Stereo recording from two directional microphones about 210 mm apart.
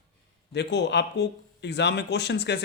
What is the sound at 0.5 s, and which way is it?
Speech, 55° left (ahead or behind).